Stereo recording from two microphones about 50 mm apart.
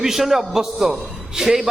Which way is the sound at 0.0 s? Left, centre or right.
Centre.